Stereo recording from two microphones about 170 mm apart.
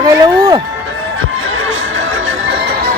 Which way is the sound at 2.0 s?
90° right.